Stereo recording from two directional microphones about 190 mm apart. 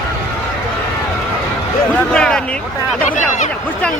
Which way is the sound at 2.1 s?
5° left (ahead or behind).